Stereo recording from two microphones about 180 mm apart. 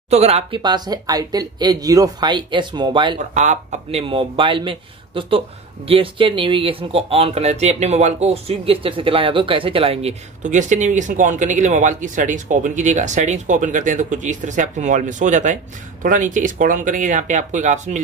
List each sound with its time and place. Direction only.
0.1 s speech: 35° right (ahead or behind)
3.3 s speech: 40° right (ahead or behind)